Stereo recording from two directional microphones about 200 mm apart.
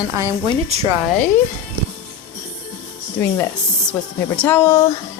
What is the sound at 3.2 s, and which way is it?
Speech, 10° left (ahead or behind).